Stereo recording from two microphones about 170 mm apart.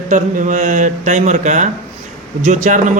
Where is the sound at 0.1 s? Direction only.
50° right (ahead or behind).